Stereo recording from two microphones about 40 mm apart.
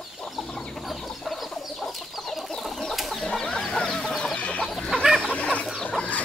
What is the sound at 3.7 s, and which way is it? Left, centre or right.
Chicken, left.